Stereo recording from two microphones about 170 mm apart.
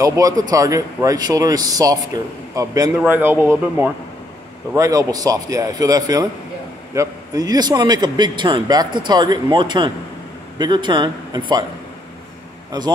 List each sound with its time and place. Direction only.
0.0 s a man's voice: 20° right (ahead or behind)